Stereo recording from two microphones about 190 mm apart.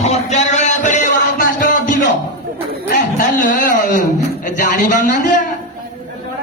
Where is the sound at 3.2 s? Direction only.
45° left (ahead or behind).